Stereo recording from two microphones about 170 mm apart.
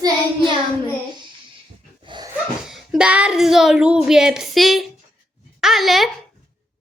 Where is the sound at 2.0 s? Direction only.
25° right (ahead or behind).